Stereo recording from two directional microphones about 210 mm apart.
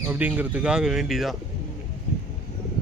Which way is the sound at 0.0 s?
10° right (ahead or behind).